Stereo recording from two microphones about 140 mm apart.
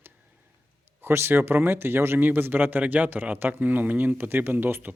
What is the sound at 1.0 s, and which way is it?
Speech, 15° right (ahead or behind).